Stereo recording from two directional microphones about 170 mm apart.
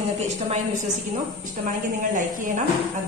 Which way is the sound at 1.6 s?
50° right (ahead or behind).